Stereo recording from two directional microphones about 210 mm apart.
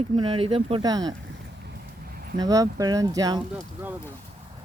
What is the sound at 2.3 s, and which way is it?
Speech, 15° right (ahead or behind).